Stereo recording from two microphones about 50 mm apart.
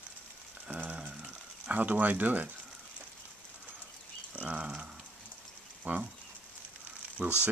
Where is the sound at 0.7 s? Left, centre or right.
Right.